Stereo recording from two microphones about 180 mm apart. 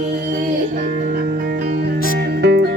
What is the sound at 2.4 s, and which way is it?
Music, 80° right.